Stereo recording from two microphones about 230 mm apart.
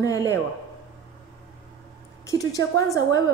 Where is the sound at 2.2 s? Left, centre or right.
Centre.